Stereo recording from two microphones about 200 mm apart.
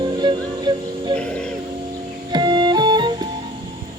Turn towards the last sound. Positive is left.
turn(degrees=-20)  # may be behind; listen again after turning